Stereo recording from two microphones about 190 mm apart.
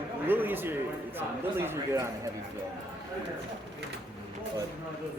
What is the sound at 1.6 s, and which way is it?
Speech, 10° right (ahead or behind).